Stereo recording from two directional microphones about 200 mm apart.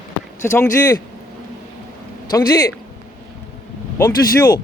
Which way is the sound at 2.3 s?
20° left (ahead or behind).